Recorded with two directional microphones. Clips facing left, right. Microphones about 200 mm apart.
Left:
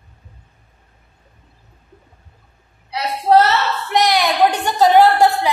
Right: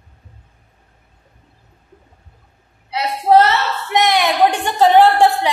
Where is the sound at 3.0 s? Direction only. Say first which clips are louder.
Right 1 dB; 15° right (ahead or behind).